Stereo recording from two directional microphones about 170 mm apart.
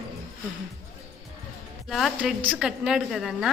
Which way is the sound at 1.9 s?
Centre (ahead or behind).